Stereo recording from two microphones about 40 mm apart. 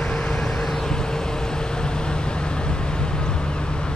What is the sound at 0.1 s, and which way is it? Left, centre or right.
Vehicle, centre.